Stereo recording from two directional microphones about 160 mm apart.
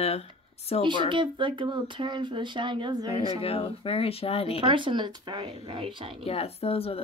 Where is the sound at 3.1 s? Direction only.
35° left (ahead or behind).